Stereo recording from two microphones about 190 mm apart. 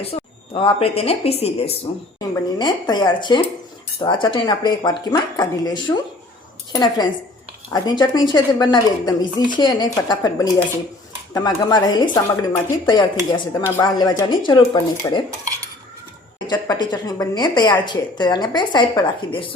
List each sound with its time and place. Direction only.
0.0 s speech: 30° left (ahead or behind)
2.1 s speech: 20° left (ahead or behind)
16.5 s speech: 20° left (ahead or behind)